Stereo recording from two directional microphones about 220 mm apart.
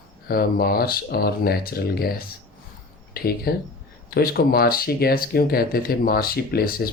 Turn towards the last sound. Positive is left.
turn(degrees=45)  # may be behind; listen again after turning